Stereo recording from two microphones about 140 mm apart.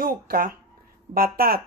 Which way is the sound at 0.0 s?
90° right.